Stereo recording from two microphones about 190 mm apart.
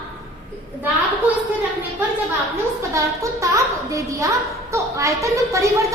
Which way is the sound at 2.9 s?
15° right (ahead or behind).